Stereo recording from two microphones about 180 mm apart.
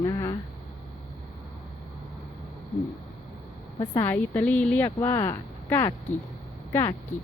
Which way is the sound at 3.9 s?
10° left (ahead or behind).